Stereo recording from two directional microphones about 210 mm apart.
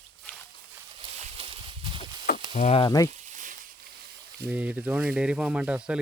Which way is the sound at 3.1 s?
35° right (ahead or behind).